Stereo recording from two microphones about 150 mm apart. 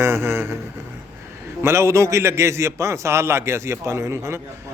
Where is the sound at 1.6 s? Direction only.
15° right (ahead or behind).